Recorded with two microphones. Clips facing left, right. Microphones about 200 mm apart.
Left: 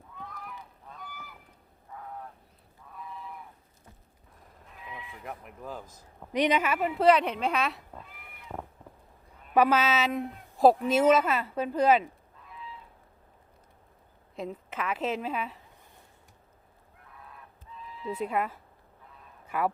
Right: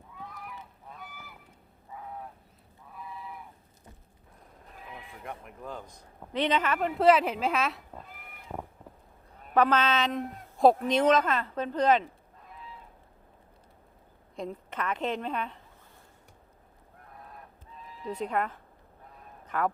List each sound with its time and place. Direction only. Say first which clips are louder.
0.9 s goose: left 2 dB; 5° right (ahead or behind)
4.7 s neigh: left 1 dB; 45° right (ahead or behind)
5.2 s speech: right 1 dB; centre (ahead or behind)
9.6 s speech: left 1 dB; 10° left (ahead or behind)
14.3 s speech: even; 5° left (ahead or behind)
17.1 s goose: right 2 dB; 40° right (ahead or behind)
18.1 s speech: even; 5° left (ahead or behind)